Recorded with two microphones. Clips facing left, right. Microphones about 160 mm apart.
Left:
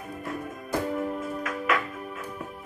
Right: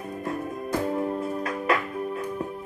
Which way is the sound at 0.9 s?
30° right (ahead or behind).